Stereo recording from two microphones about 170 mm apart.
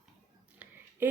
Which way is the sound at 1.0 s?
10° right (ahead or behind).